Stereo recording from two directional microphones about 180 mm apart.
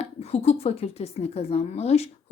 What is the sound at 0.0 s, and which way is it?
Speech, 35° left (ahead or behind).